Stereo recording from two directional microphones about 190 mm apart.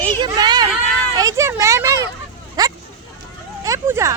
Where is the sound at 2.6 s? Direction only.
20° right (ahead or behind).